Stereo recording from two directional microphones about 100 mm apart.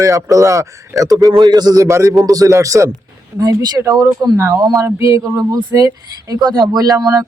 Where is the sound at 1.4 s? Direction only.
45° right (ahead or behind).